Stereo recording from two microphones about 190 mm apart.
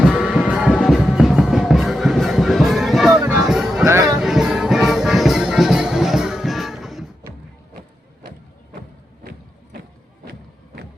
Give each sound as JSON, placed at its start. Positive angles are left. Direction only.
{"t": 0.0, "sound": "music", "side_deg": 0}
{"t": 3.8, "sound": "music", "side_deg": -15}
{"t": 4.2, "sound": "music", "side_deg": 0}